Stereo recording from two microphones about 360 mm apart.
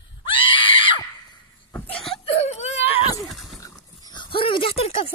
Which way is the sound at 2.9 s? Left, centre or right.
Centre.